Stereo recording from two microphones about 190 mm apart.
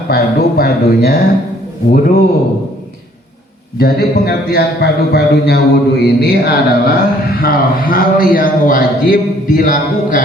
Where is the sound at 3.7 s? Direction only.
55° left (ahead or behind).